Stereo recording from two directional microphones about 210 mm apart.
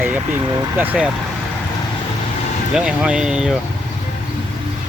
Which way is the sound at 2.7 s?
5° right (ahead or behind).